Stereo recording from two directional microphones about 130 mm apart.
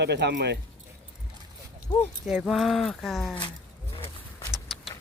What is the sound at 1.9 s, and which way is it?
Speech, 30° left (ahead or behind).